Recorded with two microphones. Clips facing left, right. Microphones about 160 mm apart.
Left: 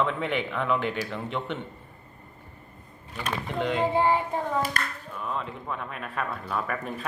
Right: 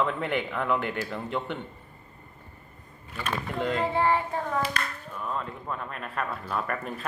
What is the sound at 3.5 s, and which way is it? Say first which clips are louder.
Speech: left 1 dB; centre (ahead or behind).